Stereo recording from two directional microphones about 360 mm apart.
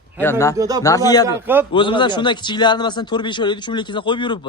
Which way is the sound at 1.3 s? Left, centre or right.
Centre.